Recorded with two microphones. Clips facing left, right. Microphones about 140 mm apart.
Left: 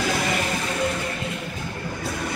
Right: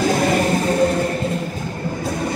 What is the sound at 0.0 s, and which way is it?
Music, 40° right (ahead or behind).